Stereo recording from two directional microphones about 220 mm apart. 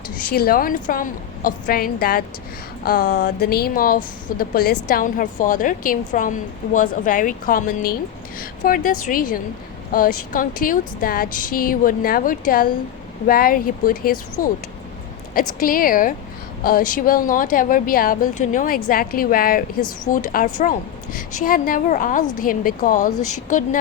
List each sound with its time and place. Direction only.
0.3 s a woman's voice: 40° left (ahead or behind)
15.6 s a woman's voice: 40° left (ahead or behind)